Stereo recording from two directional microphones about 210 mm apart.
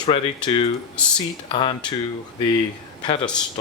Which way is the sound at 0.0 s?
25° left (ahead or behind).